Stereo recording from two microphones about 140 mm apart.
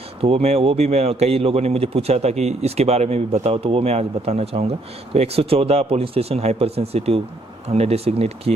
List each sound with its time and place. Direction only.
0.2 s a man's voice: 45° right (ahead or behind)